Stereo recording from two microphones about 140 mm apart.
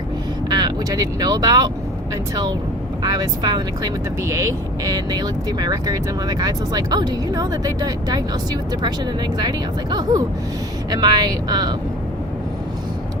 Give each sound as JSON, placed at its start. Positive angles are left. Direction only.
{"t": 0.5, "sound": "speech", "side_deg": -30}
{"t": 3.0, "sound": "speech", "side_deg": -30}